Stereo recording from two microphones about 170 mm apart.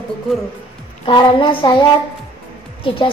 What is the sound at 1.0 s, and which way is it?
Speech, 30° left (ahead or behind).